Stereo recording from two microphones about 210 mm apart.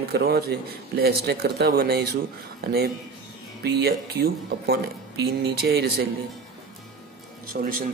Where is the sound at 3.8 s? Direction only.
50° right (ahead or behind).